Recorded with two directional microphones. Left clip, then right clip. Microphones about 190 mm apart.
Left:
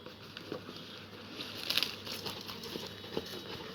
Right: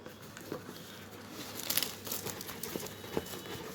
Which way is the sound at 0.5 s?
15° right (ahead or behind).